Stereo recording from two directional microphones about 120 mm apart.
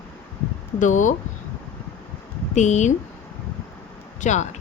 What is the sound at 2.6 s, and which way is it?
Speech, 80° left.